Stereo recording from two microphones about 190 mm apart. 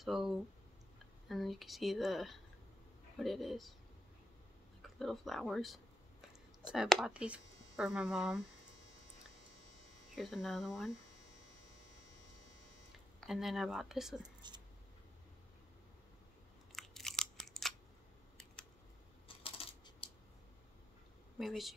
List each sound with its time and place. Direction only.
0.0 s speech: centre (ahead or behind)
1.3 s speech: centre (ahead or behind)
4.8 s speech: centre (ahead or behind)
10.1 s speech: centre (ahead or behind)
13.2 s speech: centre (ahead or behind)
14.4 s speech: 25° right (ahead or behind)
16.7 s crunch: centre (ahead or behind)
19.2 s coin: 30° left (ahead or behind)
21.4 s speech: centre (ahead or behind)